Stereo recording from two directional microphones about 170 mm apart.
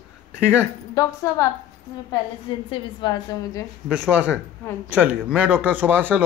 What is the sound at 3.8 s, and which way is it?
Speech, 5° right (ahead or behind).